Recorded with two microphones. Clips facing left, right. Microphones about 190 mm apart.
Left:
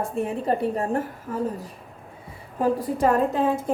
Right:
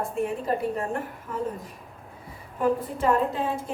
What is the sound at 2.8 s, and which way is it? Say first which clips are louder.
Speech: left 3 dB; 45° left (ahead or behind).